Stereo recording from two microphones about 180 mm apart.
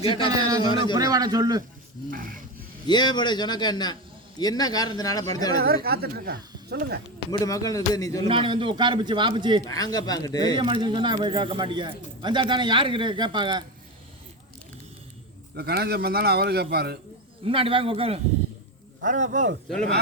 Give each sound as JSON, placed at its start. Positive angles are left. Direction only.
{"t": 0.0, "sound": "speech", "side_deg": 30}
{"t": 0.4, "sound": "speech", "side_deg": -20}
{"t": 2.0, "sound": "speech", "side_deg": -50}
{"t": 2.8, "sound": "speech", "side_deg": 25}
{"t": 5.5, "sound": "speech", "side_deg": -55}
{"t": 7.4, "sound": "speech", "side_deg": 20}
{"t": 8.3, "sound": "speech", "side_deg": -30}
{"t": 9.6, "sound": "speech", "side_deg": 20}
{"t": 10.6, "sound": "speech", "side_deg": -25}
{"t": 15.5, "sound": "speech", "side_deg": -60}
{"t": 17.4, "sound": "speech", "side_deg": -30}
{"t": 19.0, "sound": "speech", "side_deg": -45}